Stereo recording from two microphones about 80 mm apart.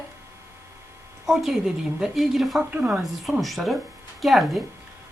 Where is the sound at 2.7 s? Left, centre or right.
Centre.